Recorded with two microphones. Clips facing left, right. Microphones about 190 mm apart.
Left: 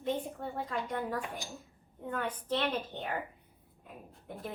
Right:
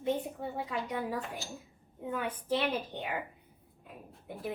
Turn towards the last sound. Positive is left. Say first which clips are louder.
# right 3 dB
turn(degrees=0)  # may be behind; listen again after turning